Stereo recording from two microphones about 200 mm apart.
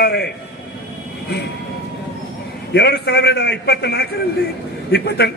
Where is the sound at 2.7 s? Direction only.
55° left (ahead or behind).